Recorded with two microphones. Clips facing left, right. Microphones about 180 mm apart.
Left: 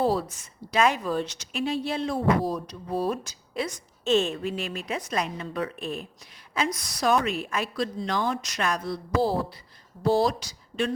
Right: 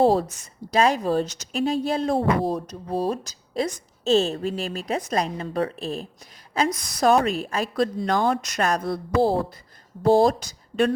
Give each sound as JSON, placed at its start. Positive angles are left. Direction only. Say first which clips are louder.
{"t": 0.0, "sound": "a woman's voice", "louder": "right 6 dB", "side_deg": -45}
{"t": 2.1, "sound": "speech", "louder": "left 1 dB", "side_deg": -30}
{"t": 2.6, "sound": "a woman's voice", "louder": "right 2 dB", "side_deg": -40}
{"t": 7.8, "sound": "speech", "louder": "right 7 dB", "side_deg": -50}